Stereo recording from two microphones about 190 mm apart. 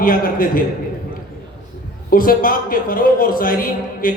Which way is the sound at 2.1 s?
50° left (ahead or behind).